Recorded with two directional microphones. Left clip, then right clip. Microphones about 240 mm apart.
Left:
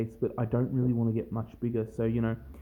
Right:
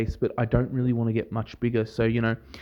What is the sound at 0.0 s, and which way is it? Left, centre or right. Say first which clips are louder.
Speech: right 5 dB; right.